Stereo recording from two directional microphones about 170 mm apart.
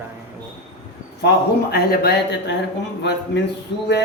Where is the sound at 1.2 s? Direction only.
65° left (ahead or behind).